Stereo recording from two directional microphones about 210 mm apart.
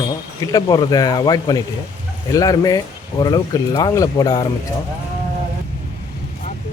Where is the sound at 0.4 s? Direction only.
20° left (ahead or behind).